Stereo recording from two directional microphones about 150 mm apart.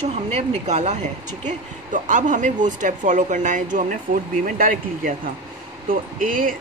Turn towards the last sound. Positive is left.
turn(degrees=-65)  # may be behind; listen again after turning